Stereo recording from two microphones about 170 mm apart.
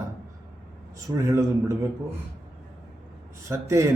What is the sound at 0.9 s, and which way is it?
Speech, 20° right (ahead or behind).